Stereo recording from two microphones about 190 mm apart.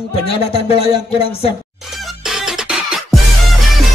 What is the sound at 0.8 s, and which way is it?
Speech, 30° left (ahead or behind).